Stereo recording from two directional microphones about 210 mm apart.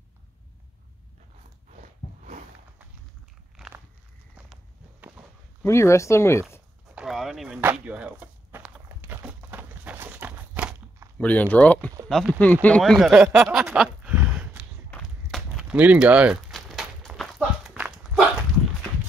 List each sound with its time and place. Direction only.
3.5 s crumpling: 5° right (ahead or behind)
5.6 s speech: 15° left (ahead or behind)
7.0 s a sound: centre (ahead or behind)
11.1 s speech: 5° left (ahead or behind)
14.9 s walk: centre (ahead or behind)